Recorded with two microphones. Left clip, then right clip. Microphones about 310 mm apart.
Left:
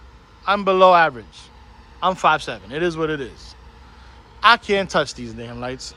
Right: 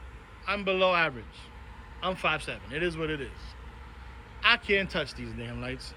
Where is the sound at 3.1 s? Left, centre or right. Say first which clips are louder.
Left 9 dB; left.